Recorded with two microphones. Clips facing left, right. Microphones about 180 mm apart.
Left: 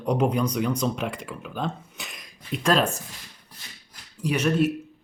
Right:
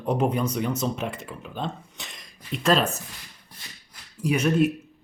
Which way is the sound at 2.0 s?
Centre (ahead or behind).